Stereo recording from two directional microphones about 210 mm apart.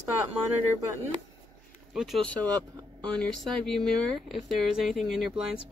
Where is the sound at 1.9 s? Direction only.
Centre (ahead or behind).